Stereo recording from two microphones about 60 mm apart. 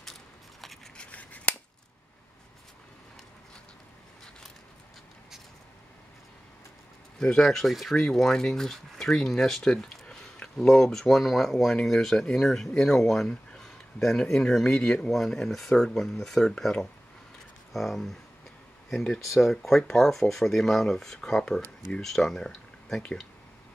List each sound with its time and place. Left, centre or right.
0.0 s a sound: centre
0.9 s scissors: left
7.2 s speech: centre
15.0 s speech: centre
19.1 s speech: centre